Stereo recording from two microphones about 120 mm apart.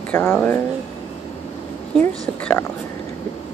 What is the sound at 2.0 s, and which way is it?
Speech, 15° left (ahead or behind).